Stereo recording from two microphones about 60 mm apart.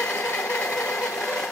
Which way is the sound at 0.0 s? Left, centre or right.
Left.